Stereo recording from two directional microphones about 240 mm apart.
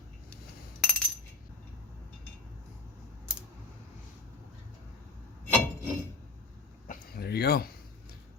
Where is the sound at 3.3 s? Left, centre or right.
Centre.